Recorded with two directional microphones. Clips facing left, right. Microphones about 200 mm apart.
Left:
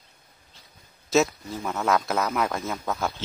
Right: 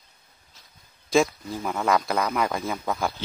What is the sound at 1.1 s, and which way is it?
Speech, centre (ahead or behind).